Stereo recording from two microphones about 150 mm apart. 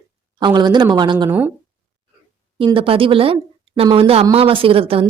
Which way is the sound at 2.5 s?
35° right (ahead or behind).